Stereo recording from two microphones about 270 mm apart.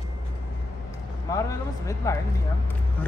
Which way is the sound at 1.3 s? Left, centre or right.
Centre.